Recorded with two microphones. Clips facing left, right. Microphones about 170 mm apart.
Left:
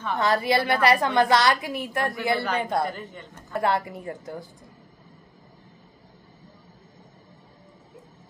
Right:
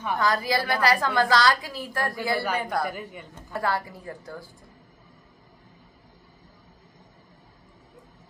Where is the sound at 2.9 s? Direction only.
10° right (ahead or behind).